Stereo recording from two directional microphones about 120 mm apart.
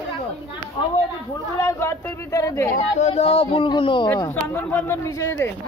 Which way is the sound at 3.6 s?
40° left (ahead or behind).